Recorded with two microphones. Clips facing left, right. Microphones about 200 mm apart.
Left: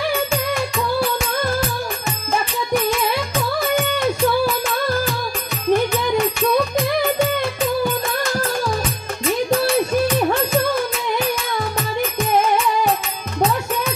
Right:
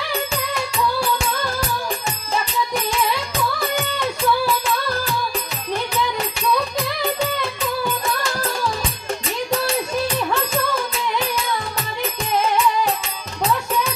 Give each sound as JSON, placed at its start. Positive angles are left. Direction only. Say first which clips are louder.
{"t": 5.7, "sound": "music", "louder": "left 7 dB", "side_deg": 50}